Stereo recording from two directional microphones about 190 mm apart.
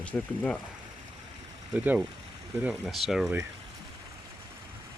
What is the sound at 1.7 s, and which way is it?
Speech, 10° right (ahead or behind).